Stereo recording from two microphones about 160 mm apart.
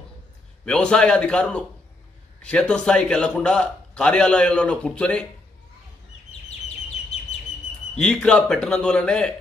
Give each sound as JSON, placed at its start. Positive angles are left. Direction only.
{"t": 0.7, "sound": "a man's voice", "side_deg": 5}
{"t": 7.1, "sound": "bird", "side_deg": 40}
{"t": 7.9, "sound": "a man's voice", "side_deg": 5}